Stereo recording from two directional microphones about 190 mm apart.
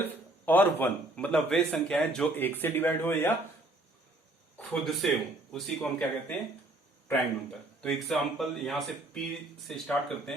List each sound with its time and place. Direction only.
0.4 s a man's voice: 10° left (ahead or behind)
4.5 s speech: 5° left (ahead or behind)
7.8 s speech: centre (ahead or behind)